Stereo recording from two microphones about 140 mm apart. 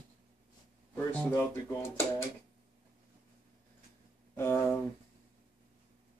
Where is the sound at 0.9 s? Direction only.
10° left (ahead or behind).